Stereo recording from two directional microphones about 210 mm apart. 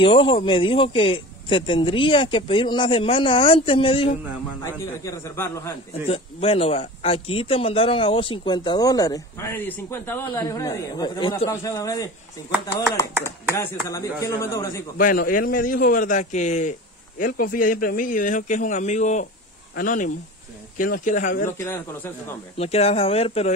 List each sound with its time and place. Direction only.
0.0 s speech: 25° left (ahead or behind)
5.0 s speech: 15° left (ahead or behind)
6.0 s speech: 25° left (ahead or behind)
13.2 s speech: 10° left (ahead or behind)
15.0 s a man's voice: 40° left (ahead or behind)
21.5 s speech: 10° left (ahead or behind)
22.6 s speech: 30° left (ahead or behind)